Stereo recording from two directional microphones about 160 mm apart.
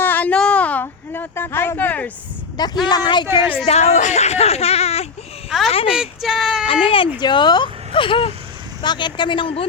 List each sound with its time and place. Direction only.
0.0 s a sound: 10° left (ahead or behind)
2.8 s speech: 25° left (ahead or behind)
3.7 s speech: 45° left (ahead or behind)
5.5 s speech: centre (ahead or behind)
6.8 s speech: 35° left (ahead or behind)